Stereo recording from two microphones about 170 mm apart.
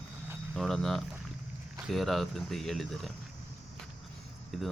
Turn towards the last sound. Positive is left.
turn(degrees=0)  # may be behind; listen again after turning